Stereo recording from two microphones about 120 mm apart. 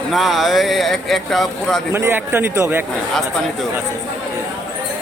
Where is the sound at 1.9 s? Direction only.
20° right (ahead or behind).